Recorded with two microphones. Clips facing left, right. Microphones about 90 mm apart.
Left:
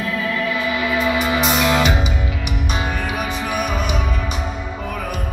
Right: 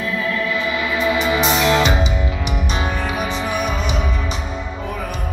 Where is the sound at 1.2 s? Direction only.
25° right (ahead or behind).